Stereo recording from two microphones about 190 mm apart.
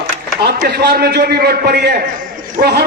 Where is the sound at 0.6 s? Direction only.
55° right (ahead or behind).